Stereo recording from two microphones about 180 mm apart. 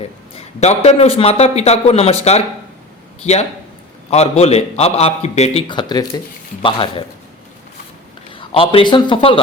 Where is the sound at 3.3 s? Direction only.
35° left (ahead or behind).